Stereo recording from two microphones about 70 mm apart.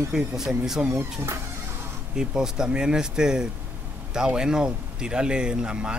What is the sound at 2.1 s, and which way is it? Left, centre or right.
Speech, centre.